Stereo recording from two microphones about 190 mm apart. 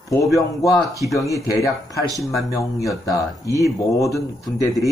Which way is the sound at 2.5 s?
15° left (ahead or behind).